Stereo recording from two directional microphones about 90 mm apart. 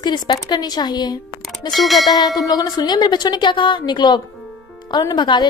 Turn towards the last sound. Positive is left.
turn(degrees=55)  # may be behind; listen again after turning